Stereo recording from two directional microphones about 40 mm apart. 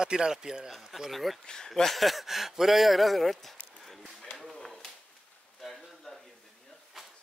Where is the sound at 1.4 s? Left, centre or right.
Centre.